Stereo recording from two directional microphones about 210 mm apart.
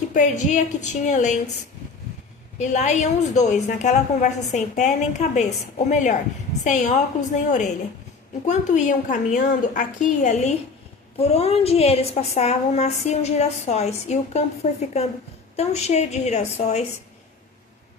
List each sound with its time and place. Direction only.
0.1 s a woman's voice: 35° left (ahead or behind)
2.6 s a woman's voice: 35° left (ahead or behind)
8.4 s a woman's voice: 35° left (ahead or behind)